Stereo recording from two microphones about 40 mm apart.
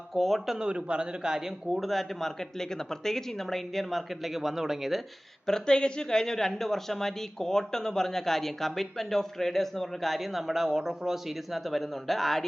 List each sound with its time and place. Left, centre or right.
0.1 s speech: centre
0.6 s a man's voice: right
1.8 s speech: centre
5.5 s speech: centre